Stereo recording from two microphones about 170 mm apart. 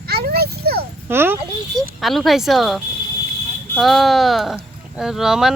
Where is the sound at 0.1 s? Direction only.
70° right (ahead or behind).